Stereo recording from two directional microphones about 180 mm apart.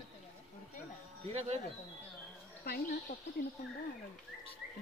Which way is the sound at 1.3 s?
35° right (ahead or behind).